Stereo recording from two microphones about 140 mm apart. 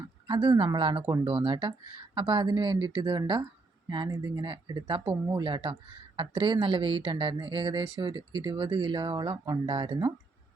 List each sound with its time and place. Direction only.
0.3 s speech: 35° right (ahead or behind)
4.1 s speech: 25° right (ahead or behind)
4.4 s speech: 35° right (ahead or behind)